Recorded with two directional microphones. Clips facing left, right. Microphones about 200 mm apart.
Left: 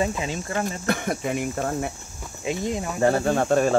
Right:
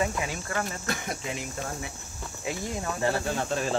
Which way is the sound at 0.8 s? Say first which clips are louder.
Left 8 dB; 55° left (ahead or behind).